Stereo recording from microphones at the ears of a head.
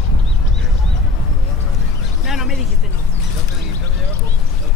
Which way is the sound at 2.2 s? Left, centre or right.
Left.